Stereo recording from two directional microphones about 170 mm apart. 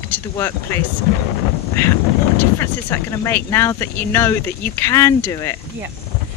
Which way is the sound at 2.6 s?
15° left (ahead or behind).